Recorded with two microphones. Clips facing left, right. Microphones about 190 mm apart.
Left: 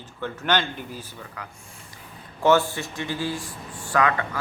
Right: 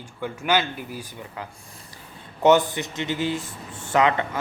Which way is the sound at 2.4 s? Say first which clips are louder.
Right 2 dB; 20° right (ahead or behind).